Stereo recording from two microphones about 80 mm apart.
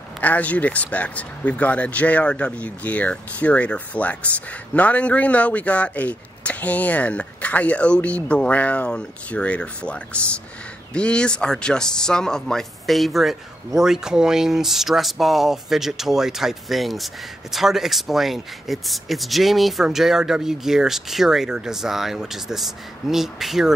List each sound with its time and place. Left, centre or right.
0.2 s speech: centre